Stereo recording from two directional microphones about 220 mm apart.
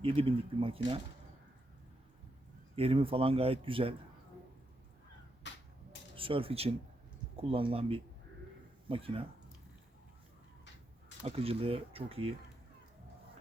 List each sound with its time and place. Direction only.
0.0 s speech: 25° right (ahead or behind)
2.7 s speech: 25° right (ahead or behind)
5.5 s a sound: 55° left (ahead or behind)
6.1 s speech: 25° right (ahead or behind)
11.2 s speech: 25° right (ahead or behind)